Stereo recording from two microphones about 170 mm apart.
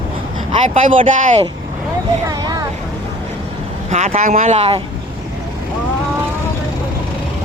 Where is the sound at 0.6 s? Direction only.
50° right (ahead or behind).